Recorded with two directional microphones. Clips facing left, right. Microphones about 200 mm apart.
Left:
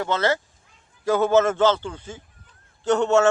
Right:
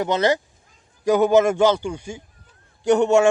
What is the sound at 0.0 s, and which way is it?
A man's voice, 15° right (ahead or behind).